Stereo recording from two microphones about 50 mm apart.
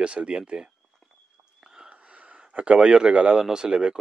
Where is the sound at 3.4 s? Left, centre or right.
Centre.